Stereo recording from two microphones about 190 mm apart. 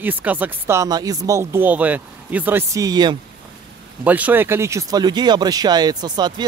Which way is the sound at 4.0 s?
10° right (ahead or behind).